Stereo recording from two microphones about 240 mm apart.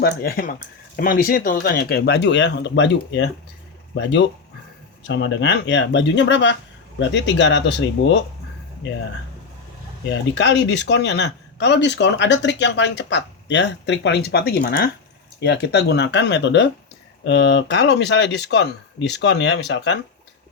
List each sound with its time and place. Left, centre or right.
0.0 s speech: left
5.0 s speech: left
10.3 s speech: left